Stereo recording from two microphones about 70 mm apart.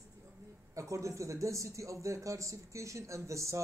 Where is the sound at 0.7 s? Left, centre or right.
Right.